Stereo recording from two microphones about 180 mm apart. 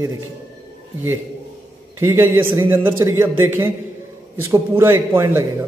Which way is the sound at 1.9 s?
15° right (ahead or behind).